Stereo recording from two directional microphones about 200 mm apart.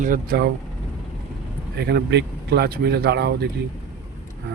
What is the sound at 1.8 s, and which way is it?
Speech, 55° right (ahead or behind).